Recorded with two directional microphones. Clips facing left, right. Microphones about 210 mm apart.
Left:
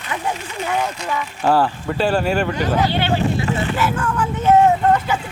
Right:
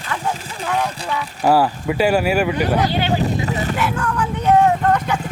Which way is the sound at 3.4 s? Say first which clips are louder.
Left 1 dB; 40° right (ahead or behind).